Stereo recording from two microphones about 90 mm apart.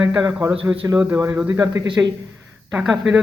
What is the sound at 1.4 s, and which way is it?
Speech, 35° right (ahead or behind).